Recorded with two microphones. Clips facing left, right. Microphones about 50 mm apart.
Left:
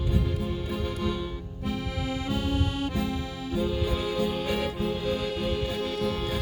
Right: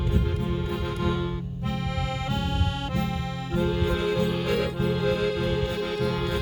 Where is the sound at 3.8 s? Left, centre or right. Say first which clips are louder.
Right 3 dB; right.